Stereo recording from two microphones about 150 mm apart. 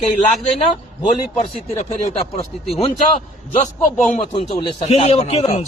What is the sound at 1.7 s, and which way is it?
A man's voice, 45° left (ahead or behind).